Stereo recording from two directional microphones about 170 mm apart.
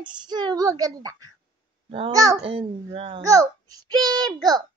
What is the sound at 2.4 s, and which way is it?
Music, 35° right (ahead or behind).